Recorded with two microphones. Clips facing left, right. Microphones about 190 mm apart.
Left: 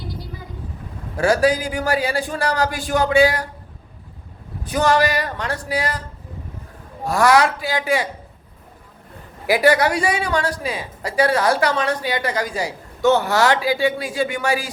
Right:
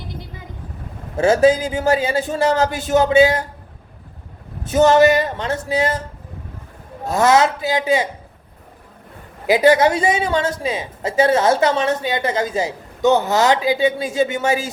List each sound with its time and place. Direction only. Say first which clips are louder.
0.1 s vehicle: left 1 dB; 20° right (ahead or behind)
1.1 s a woman's voice: right 3 dB; 25° right (ahead or behind)
4.6 s a woman's voice: right 6 dB; 25° right (ahead or behind)
7.0 s a woman's voice: right 1 dB; 20° right (ahead or behind)
9.5 s a woman's voice: right 3 dB; 20° right (ahead or behind)